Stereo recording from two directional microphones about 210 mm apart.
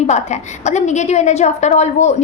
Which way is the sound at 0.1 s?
35° left (ahead or behind).